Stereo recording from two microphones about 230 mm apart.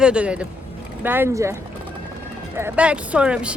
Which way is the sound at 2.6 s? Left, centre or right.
Centre.